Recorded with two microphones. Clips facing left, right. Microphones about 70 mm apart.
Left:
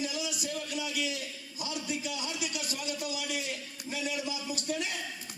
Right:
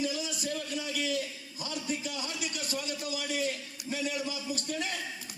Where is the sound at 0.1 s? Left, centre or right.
Right.